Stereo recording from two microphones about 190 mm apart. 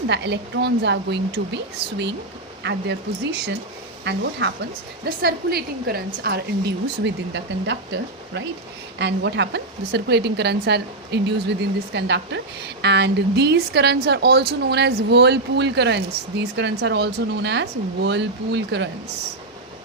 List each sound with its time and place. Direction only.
0.1 s a woman's voice: 65° right (ahead or behind)
4.0 s a woman's voice: 65° right (ahead or behind)
5.0 s a woman's voice: 55° right (ahead or behind)
9.0 s a woman's voice: 65° right (ahead or behind)